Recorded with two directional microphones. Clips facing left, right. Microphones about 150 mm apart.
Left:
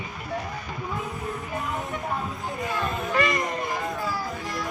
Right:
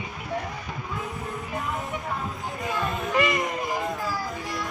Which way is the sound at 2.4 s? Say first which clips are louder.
Right 2 dB; centre (ahead or behind).